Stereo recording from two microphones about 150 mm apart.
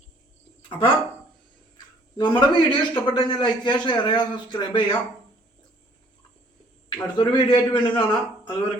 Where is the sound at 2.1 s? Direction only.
30° left (ahead or behind).